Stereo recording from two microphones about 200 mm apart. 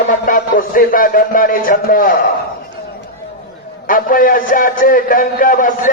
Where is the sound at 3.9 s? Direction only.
45° left (ahead or behind).